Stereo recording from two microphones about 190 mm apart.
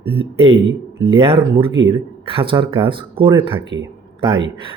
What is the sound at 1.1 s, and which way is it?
Speech, 30° right (ahead or behind).